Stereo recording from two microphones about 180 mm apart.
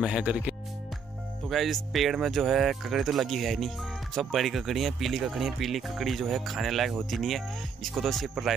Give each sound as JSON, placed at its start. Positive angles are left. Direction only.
{"t": 0.0, "sound": "speech", "side_deg": -5}